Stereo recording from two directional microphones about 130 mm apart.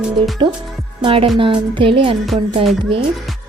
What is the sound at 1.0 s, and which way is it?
A woman's voice, 45° right (ahead or behind).